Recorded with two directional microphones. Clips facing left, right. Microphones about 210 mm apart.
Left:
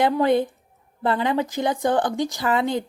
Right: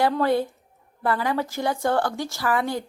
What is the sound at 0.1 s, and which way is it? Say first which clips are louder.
Speech: left 3 dB; 20° left (ahead or behind).